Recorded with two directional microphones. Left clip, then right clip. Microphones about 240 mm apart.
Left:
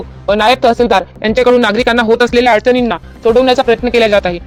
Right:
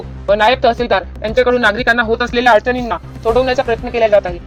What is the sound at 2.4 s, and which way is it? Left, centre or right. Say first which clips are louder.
Speech: left 2 dB; left.